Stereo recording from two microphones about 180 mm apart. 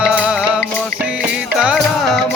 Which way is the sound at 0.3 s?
5° right (ahead or behind).